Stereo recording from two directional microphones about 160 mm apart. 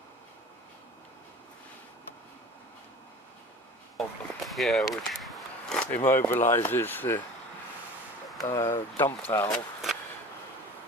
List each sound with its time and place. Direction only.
3.9 s a sound: centre (ahead or behind)
6.0 s speech: 15° left (ahead or behind)
8.4 s speech: 20° left (ahead or behind)